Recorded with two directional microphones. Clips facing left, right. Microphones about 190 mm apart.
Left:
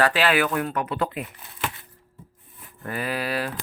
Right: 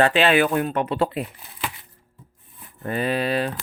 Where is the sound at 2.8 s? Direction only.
25° right (ahead or behind).